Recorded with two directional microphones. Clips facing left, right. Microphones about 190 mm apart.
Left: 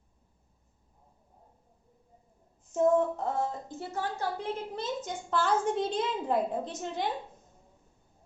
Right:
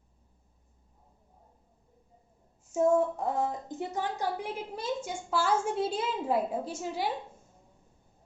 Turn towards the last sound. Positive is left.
turn(degrees=-5)  # may be behind; listen again after turning